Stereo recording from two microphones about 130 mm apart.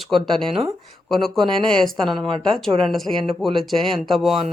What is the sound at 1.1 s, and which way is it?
Speech, centre (ahead or behind).